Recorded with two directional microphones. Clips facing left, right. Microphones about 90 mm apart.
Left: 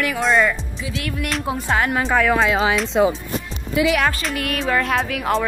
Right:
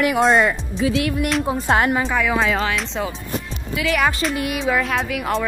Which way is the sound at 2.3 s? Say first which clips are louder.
Left 2 dB; centre (ahead or behind).